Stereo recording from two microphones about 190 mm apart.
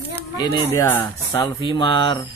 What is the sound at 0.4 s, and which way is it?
Speech, 15° left (ahead or behind).